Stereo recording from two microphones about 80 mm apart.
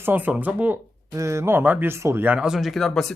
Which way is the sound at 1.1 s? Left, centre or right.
Right.